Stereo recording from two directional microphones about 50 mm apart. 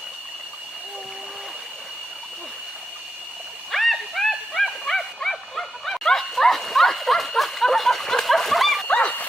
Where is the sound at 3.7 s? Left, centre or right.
Centre.